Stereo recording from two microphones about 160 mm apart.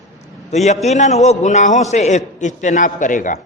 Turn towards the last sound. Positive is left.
turn(degrees=55)  # may be behind; listen again after turning